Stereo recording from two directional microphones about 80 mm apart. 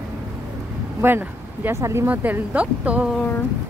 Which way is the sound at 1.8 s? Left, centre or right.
Right.